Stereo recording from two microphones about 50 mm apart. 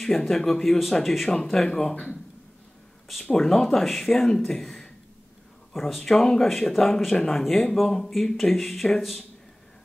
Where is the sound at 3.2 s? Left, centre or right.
Centre.